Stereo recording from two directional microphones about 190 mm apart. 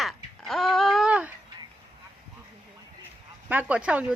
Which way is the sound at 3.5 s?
10° right (ahead or behind).